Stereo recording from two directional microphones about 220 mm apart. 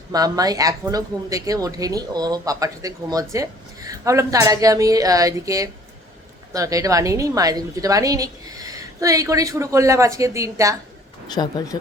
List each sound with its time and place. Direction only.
0.1 s speech: 15° right (ahead or behind)
11.3 s speech: 20° left (ahead or behind)